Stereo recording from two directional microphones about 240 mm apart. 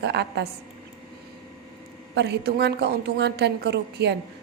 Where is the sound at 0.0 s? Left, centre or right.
Right.